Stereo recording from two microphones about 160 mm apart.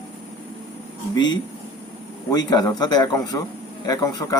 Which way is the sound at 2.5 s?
25° left (ahead or behind).